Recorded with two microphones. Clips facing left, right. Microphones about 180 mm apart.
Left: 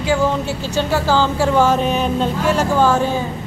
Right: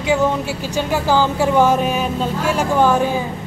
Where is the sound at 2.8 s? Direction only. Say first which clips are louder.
Right 2 dB; 15° right (ahead or behind).